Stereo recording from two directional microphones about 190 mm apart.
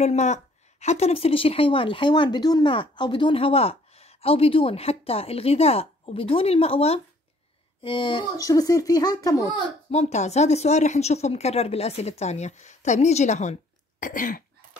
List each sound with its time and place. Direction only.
0.0 s a woman's voice: 35° left (ahead or behind); by 9.5 s 20° left (ahead or behind)
9.8 s a woman's voice: 35° left (ahead or behind)